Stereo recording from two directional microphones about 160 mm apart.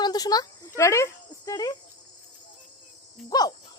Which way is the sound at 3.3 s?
25° left (ahead or behind).